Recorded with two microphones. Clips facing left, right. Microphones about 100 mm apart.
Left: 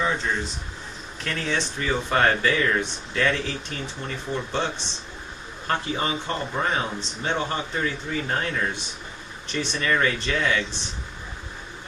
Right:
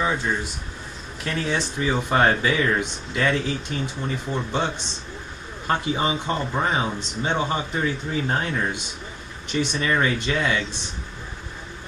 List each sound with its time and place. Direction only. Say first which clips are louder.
0.0 s speech: right 1 dB; 10° right (ahead or behind)
5.7 s speech: right 3 dB; 15° right (ahead or behind)